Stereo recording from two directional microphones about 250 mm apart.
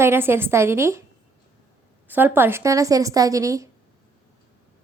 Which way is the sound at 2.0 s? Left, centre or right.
Centre.